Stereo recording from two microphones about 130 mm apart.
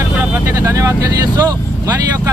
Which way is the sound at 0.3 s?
25° right (ahead or behind).